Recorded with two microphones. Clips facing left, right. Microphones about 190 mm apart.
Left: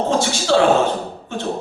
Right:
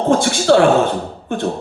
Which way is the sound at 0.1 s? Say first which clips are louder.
Right 7 dB; 55° right (ahead or behind).